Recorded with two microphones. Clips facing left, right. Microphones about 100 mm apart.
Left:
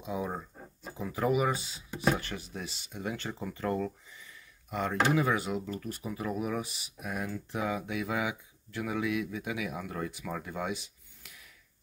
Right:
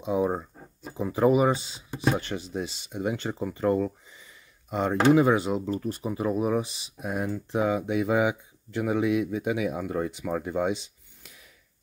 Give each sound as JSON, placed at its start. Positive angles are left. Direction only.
{"t": 0.0, "sound": "speech", "side_deg": -25}